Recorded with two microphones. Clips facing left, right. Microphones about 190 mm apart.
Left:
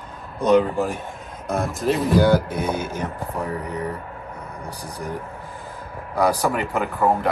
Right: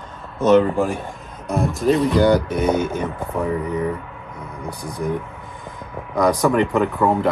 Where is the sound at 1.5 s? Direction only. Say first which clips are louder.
Right 4 dB; centre (ahead or behind).